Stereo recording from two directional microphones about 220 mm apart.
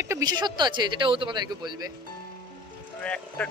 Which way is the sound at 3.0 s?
5° left (ahead or behind).